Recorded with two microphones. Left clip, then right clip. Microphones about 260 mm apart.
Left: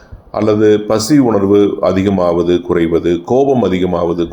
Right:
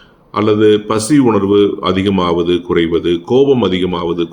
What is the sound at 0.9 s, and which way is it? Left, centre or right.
Speech, centre.